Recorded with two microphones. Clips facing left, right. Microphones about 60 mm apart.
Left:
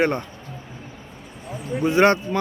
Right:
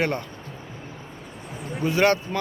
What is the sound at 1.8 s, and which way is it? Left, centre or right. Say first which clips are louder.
Speech: left 3 dB; left.